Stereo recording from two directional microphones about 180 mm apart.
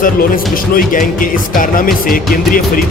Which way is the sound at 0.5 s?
50° left (ahead or behind).